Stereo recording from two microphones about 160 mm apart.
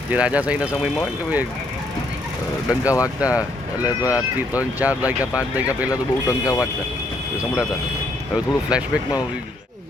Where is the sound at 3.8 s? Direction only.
20° left (ahead or behind).